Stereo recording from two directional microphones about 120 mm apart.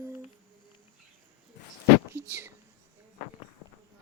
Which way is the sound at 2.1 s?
15° right (ahead or behind).